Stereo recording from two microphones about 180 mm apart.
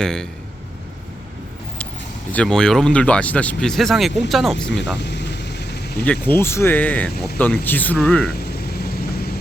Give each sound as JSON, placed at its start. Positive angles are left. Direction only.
{"t": 0.0, "sound": "speech", "side_deg": 5}
{"t": 2.3, "sound": "speech", "side_deg": 5}
{"t": 4.9, "sound": "vehicle", "side_deg": 70}
{"t": 6.1, "sound": "speech", "side_deg": 10}
{"t": 8.3, "sound": "vehicle", "side_deg": 60}